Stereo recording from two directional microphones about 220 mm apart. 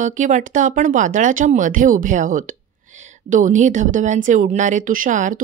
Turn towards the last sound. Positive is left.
turn(degrees=-35)  # may be behind; listen again after turning